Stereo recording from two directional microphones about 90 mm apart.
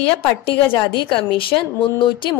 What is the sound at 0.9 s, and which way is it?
Speech, 75° left (ahead or behind).